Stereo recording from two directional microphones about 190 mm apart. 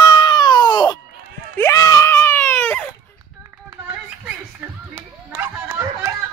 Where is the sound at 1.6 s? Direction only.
15° left (ahead or behind).